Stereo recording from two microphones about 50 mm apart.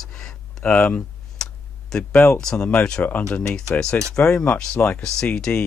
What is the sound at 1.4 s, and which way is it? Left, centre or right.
Tick-tock, centre.